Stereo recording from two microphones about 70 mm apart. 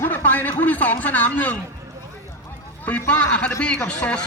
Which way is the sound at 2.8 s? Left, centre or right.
Left.